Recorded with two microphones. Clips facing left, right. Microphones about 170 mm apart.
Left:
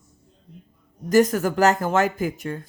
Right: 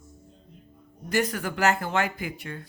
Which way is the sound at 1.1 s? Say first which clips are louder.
Left 9 dB; 45° left (ahead or behind).